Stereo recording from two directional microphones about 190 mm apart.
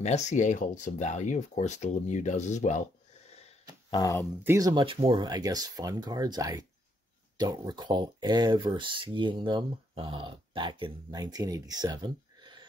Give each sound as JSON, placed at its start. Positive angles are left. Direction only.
{"t": 0.0, "sound": "speech", "side_deg": 35}
{"t": 3.9, "sound": "speech", "side_deg": 20}
{"t": 4.4, "sound": "speech", "side_deg": -15}